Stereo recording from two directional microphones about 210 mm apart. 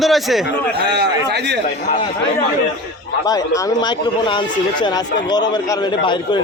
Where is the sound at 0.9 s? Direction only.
55° right (ahead or behind).